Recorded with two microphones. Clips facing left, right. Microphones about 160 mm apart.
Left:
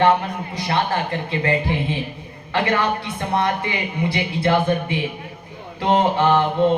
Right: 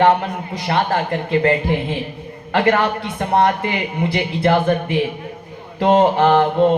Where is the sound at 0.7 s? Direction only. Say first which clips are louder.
Right 3 dB; 45° right (ahead or behind).